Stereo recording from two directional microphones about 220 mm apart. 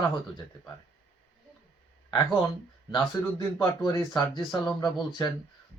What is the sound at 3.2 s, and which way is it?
Speech, 10° left (ahead or behind).